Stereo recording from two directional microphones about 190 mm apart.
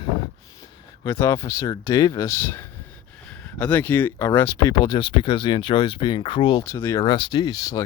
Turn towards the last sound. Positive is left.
turn(degrees=20)  # may be behind; listen again after turning